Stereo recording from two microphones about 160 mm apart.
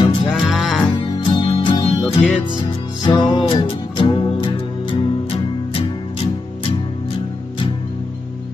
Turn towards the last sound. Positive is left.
turn(degrees=35)  # may be behind; listen again after turning